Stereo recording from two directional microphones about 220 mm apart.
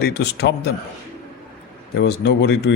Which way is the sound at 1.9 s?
50° left (ahead or behind).